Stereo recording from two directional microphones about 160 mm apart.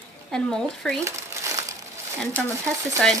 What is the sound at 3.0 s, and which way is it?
Speech, 5° left (ahead or behind).